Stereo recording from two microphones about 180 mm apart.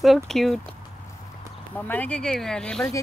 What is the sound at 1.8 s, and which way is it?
Speech, 10° left (ahead or behind).